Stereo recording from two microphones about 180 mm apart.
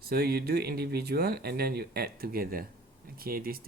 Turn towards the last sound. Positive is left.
turn(degrees=-55)  # may be behind; listen again after turning